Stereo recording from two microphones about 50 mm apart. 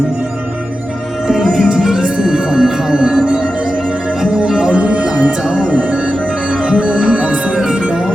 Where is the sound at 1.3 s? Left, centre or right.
Centre.